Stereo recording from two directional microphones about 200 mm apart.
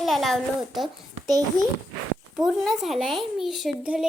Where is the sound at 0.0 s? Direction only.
Centre (ahead or behind).